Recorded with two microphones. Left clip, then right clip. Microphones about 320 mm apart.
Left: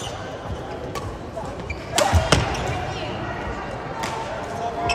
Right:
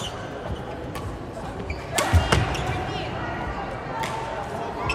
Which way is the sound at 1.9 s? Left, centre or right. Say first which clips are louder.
Left 4 dB; left.